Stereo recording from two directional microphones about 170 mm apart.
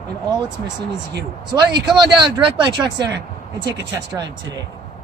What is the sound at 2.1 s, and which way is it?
Speech, 20° right (ahead or behind).